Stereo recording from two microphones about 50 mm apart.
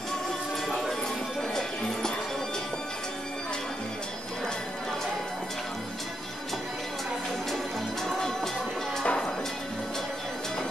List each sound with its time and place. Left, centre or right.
0.7 s music: centre
9.0 s music: centre